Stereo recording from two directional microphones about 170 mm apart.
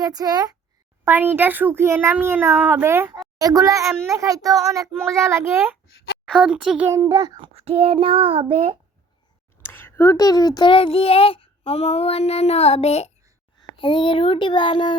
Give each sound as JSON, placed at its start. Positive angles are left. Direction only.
{"t": 0.0, "sound": "a child's voice", "side_deg": -20}
{"t": 1.0, "sound": "a child's voice", "side_deg": -10}
{"t": 6.2, "sound": "a child's voice", "side_deg": -5}
{"t": 7.1, "sound": "child singing", "side_deg": -25}
{"t": 9.6, "sound": "a child's voice", "side_deg": 15}